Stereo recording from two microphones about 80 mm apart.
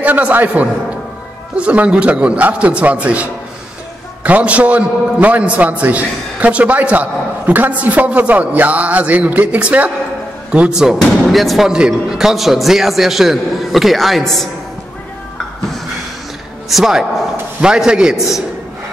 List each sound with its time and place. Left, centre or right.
0.0 s a man's voice: right; by 14.5 s centre
16.6 s a man's voice: centre